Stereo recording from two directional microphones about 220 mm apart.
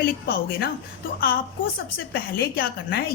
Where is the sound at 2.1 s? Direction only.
45° left (ahead or behind).